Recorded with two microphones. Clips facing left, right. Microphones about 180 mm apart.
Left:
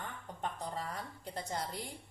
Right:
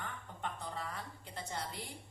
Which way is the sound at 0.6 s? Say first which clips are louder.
Left 3 dB; 40° left (ahead or behind).